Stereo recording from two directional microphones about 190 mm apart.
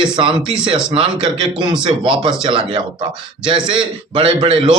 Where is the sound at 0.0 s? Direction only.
25° right (ahead or behind).